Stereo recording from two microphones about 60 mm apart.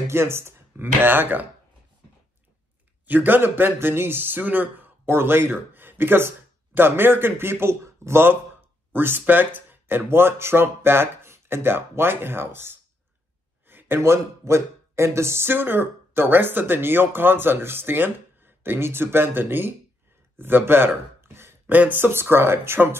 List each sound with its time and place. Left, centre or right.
0.1 s speech: right
3.1 s speech: right
15.5 s speech: right
20.3 s a sound: right
21.7 s speech: right